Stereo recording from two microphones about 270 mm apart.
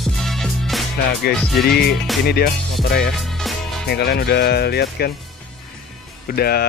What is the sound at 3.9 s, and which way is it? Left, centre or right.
Speech, left.